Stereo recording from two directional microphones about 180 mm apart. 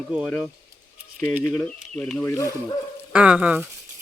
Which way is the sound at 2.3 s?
15° left (ahead or behind).